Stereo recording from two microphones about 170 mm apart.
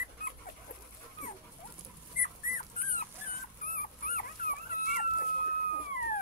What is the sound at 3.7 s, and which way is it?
Dog, 55° left (ahead or behind).